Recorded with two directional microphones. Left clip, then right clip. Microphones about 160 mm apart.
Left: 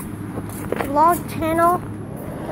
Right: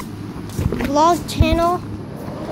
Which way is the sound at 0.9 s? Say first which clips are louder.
Right 1 dB; 35° right (ahead or behind).